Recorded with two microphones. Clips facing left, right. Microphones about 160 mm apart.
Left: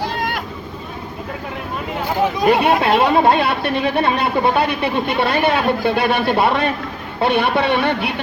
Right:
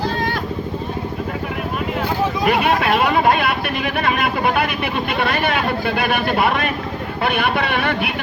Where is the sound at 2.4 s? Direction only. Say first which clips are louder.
Left 3 dB; 25° left (ahead or behind).